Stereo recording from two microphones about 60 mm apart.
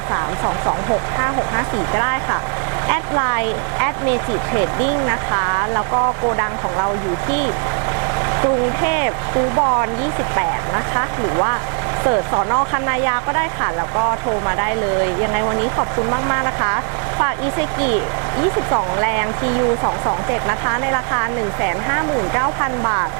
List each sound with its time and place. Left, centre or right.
0.1 s speech: right
7.3 s speech: centre
10.9 s speech: right